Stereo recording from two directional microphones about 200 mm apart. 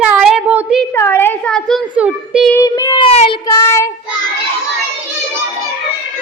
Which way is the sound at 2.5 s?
20° left (ahead or behind).